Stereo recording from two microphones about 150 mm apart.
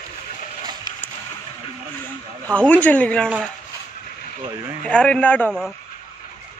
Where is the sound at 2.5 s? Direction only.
10° left (ahead or behind).